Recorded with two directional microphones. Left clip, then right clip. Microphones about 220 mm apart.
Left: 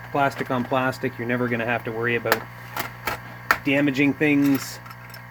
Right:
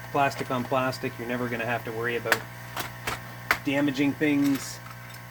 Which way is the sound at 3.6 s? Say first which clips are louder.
Left 6 dB; 25° left (ahead or behind).